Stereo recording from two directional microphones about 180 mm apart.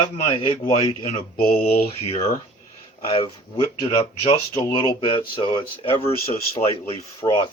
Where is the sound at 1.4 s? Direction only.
55° left (ahead or behind).